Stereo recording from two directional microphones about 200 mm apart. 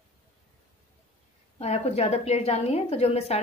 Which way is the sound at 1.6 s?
30° left (ahead or behind).